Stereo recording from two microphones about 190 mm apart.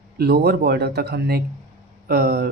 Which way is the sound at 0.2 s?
55° right (ahead or behind).